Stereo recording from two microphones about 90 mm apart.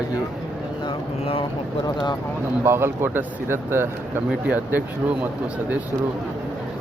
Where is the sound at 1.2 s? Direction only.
90° left.